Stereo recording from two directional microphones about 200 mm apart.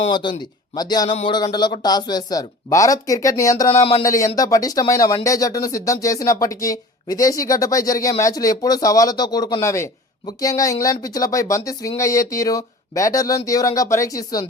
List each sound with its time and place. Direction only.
0.0 s speech: 25° left (ahead or behind)
3.8 s speech: 30° left (ahead or behind)
4.0 s speech: 15° left (ahead or behind)